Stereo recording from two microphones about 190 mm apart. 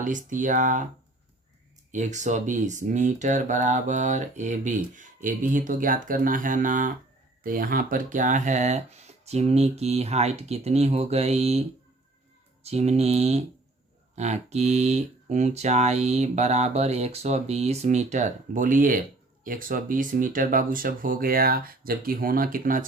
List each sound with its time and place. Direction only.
0.0 s speech: 45° right (ahead or behind)
1.9 s speech: 40° right (ahead or behind)
12.6 s speech: 35° right (ahead or behind)